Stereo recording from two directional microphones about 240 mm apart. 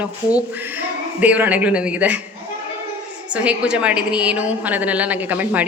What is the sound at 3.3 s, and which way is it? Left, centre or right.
A woman's voice, centre.